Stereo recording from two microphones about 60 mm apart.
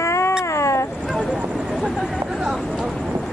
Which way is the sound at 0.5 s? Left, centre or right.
Left.